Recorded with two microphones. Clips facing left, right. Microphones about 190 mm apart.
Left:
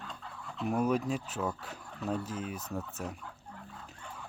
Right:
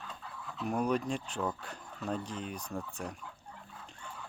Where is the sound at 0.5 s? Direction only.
5° left (ahead or behind).